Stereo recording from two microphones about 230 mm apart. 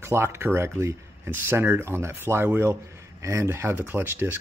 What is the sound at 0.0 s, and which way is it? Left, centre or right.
Speech, centre.